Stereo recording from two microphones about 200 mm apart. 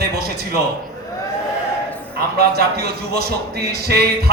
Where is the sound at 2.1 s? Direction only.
50° right (ahead or behind).